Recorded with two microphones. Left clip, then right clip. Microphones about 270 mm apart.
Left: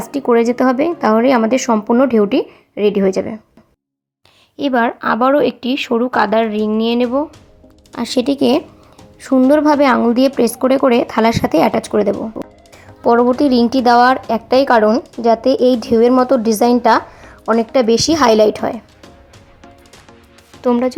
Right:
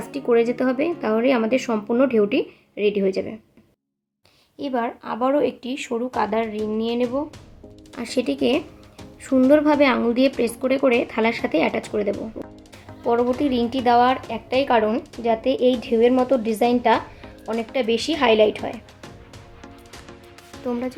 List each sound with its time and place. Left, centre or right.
0.0 s a woman's voice: centre
4.5 s a woman's voice: left
12.4 s music: centre
13.1 s a woman's voice: left
20.7 s a woman's voice: centre